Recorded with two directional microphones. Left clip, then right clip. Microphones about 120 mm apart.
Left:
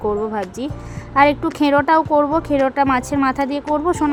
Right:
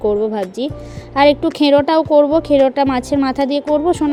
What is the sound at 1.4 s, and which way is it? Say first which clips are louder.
Speech: right 4 dB; 10° right (ahead or behind).